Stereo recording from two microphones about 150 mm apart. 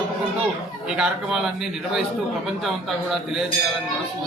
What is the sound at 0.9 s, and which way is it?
Speech, 5° right (ahead or behind).